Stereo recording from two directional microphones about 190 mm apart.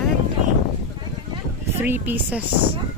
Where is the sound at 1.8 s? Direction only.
10° right (ahead or behind).